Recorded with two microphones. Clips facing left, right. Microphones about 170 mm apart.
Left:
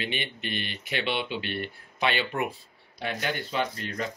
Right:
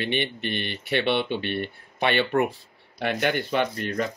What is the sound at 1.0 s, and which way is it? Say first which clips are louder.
Speech: right 5 dB; 55° right (ahead or behind).